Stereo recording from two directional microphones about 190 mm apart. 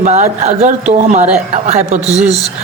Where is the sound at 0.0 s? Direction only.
35° right (ahead or behind).